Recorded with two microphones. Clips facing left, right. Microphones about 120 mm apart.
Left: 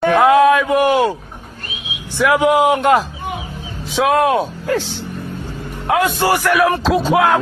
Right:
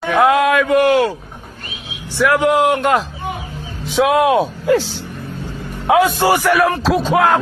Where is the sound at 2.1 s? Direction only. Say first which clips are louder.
Left 1 dB; 10° left (ahead or behind).